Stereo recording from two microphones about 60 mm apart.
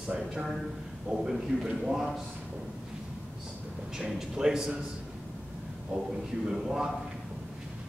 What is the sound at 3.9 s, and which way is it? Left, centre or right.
Speech, centre.